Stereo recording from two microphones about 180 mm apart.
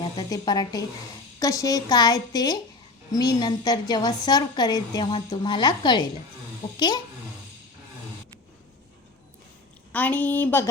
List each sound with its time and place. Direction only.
0.0 s a woman's voice: 20° left (ahead or behind)
9.9 s a woman's voice: 10° left (ahead or behind)